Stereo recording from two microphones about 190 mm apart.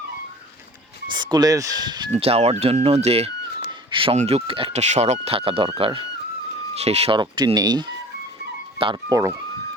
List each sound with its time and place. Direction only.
1.1 s speech: 20° right (ahead or behind)